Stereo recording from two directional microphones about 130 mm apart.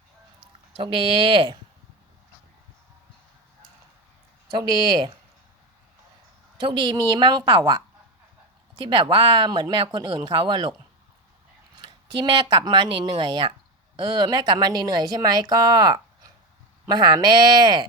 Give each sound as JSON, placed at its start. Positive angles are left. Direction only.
{"t": 0.8, "sound": "speech", "side_deg": -40}
{"t": 4.5, "sound": "speech", "side_deg": -35}
{"t": 6.6, "sound": "speech", "side_deg": -40}
{"t": 11.8, "sound": "speech", "side_deg": -35}